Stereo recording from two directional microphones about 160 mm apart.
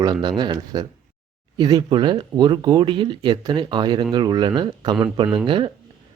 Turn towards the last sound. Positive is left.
turn(degrees=-35)  # may be behind; listen again after turning